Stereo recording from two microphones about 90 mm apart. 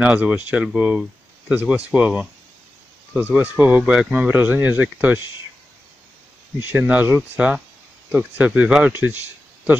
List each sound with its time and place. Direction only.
0.0 s speech: 15° right (ahead or behind)
6.6 s speech: 20° right (ahead or behind)